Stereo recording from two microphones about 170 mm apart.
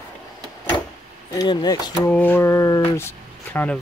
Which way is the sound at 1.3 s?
20° left (ahead or behind).